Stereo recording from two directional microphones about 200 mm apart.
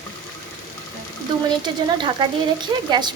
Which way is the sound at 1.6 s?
20° right (ahead or behind).